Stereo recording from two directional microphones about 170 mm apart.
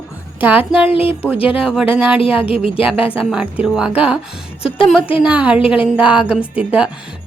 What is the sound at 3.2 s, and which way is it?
Speech, 5° right (ahead or behind).